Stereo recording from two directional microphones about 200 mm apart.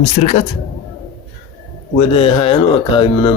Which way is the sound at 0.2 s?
35° left (ahead or behind).